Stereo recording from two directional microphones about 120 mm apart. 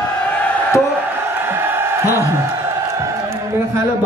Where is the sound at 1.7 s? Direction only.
20° right (ahead or behind).